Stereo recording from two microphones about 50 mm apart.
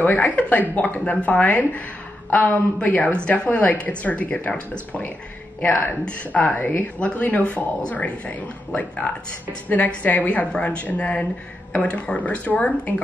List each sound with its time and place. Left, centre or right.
0.0 s speech: left